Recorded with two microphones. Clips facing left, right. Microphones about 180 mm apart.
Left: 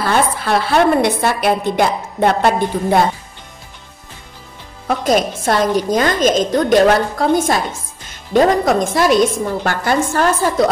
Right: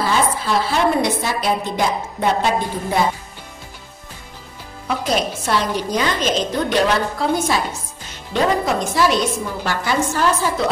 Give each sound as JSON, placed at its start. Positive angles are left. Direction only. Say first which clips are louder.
{"t": 0.0, "sound": "a woman's voice", "louder": "left 2 dB", "side_deg": 60}
{"t": 4.8, "sound": "a woman's voice", "louder": "left 5 dB", "side_deg": 45}